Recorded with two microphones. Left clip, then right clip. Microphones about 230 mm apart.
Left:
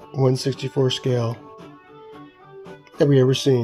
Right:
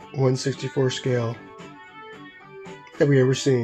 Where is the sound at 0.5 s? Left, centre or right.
Left.